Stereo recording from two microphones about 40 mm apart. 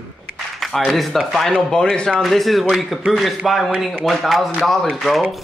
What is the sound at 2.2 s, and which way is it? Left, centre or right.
Speech, centre.